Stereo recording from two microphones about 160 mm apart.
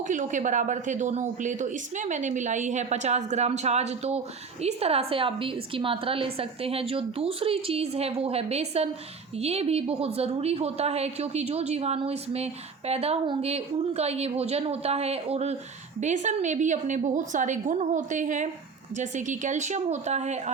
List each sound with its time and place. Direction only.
0.1 s a woman's voice: 50° right (ahead or behind)